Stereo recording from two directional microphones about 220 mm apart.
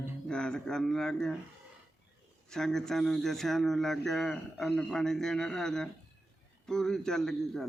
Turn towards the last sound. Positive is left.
turn(degrees=0)  # may be behind; listen again after turning